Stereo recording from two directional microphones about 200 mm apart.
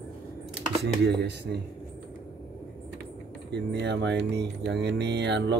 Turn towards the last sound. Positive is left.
turn(degrees=-60)  # may be behind; listen again after turning